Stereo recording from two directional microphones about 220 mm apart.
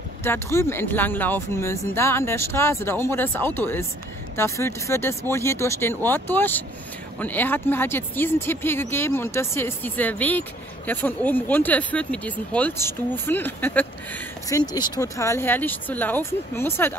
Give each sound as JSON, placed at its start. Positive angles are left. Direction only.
{"t": 0.2, "sound": "speech", "side_deg": 10}